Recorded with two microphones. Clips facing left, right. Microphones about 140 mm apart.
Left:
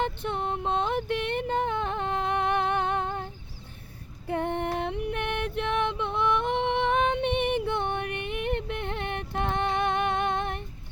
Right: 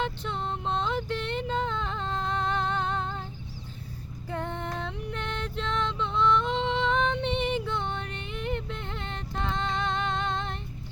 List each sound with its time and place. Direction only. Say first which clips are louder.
0.0 s music: left 2 dB; 55° left (ahead or behind)
2.1 s a sound: left 3 dB; 60° left (ahead or behind)
4.3 s music: left 5 dB; 60° left (ahead or behind)